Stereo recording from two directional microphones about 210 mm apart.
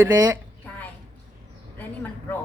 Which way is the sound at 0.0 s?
15° right (ahead or behind).